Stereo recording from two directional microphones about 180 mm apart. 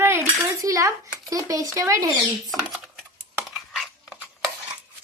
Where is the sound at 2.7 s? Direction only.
Centre (ahead or behind).